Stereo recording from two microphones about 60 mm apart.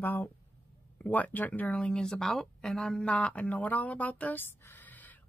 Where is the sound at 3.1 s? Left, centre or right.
Left.